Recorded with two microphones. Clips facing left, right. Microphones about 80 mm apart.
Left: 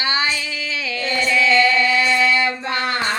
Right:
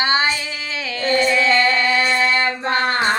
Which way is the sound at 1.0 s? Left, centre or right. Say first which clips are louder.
Right 2 dB; right.